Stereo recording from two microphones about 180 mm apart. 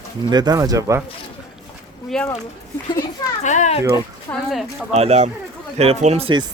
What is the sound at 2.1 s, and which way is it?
Speech, centre (ahead or behind).